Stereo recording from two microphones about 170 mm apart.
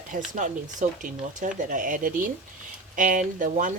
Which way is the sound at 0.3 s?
50° right (ahead or behind).